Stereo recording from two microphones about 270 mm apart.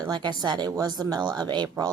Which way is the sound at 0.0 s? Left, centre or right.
Centre.